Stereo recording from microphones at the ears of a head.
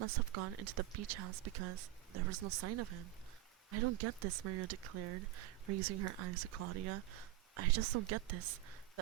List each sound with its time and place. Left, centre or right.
0.0 s speech: right